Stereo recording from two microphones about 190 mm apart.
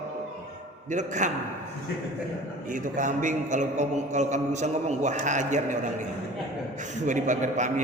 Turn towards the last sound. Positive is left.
turn(degrees=-40)  # may be behind; listen again after turning